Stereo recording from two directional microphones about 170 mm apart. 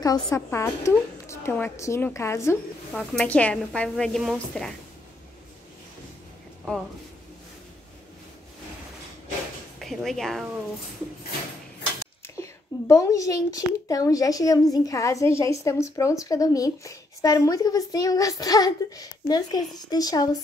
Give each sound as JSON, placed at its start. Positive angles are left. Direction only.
{"t": 0.0, "sound": "a woman's voice", "side_deg": 20}
{"t": 2.9, "sound": "speech", "side_deg": 5}
{"t": 9.8, "sound": "speech", "side_deg": 0}
{"t": 12.4, "sound": "a child's voice", "side_deg": 20}